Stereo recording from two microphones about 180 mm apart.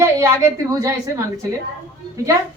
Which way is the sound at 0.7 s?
15° right (ahead or behind).